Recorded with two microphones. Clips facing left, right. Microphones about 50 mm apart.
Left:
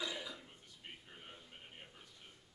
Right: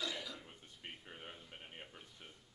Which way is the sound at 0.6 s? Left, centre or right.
Right.